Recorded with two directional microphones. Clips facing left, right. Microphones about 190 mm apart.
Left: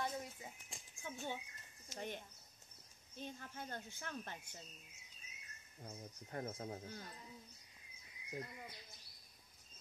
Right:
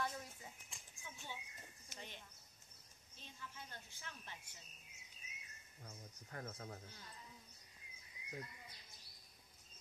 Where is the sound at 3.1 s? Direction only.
50° left (ahead or behind).